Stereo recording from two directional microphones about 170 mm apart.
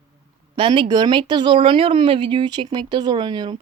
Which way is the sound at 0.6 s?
30° right (ahead or behind).